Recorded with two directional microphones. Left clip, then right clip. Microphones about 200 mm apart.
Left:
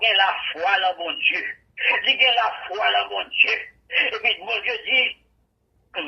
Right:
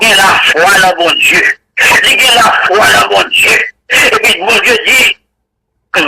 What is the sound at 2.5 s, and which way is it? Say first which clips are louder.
Speech: right 16 dB; 45° right (ahead or behind).